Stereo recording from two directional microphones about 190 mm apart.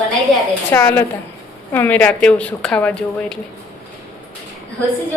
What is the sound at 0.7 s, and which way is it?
A woman's voice, 10° left (ahead or behind).